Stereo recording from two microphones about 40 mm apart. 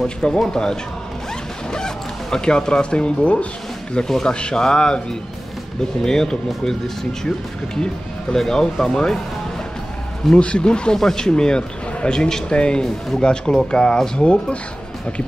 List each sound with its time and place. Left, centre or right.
0.0 s speech: centre
2.3 s speech: centre
4.1 s speech: centre
6.0 s speech: centre
10.3 s speech: left
14.2 s speech: left